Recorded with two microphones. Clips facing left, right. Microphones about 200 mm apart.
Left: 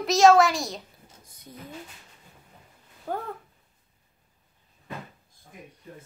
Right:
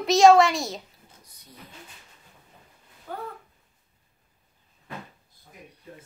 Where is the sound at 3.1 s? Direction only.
50° left (ahead or behind).